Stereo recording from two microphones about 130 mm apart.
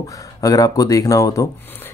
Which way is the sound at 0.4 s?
25° left (ahead or behind).